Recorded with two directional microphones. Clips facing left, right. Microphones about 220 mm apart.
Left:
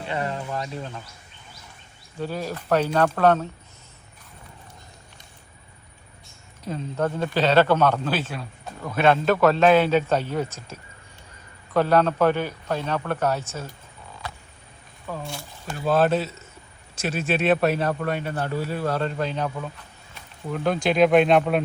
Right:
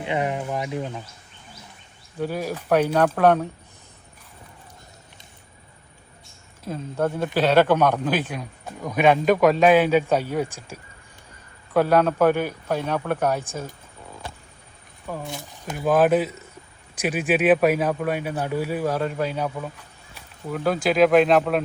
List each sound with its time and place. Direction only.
0.0 s speech: 15° right (ahead or behind)
2.1 s speech: 10° right (ahead or behind)
6.7 s speech: 10° right (ahead or behind)
15.0 s speech: 15° right (ahead or behind)